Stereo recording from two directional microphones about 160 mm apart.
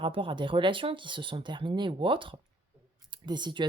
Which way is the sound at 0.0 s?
35° right (ahead or behind).